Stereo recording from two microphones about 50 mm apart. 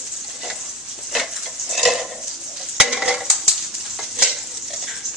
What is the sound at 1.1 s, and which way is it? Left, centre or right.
Stir, centre.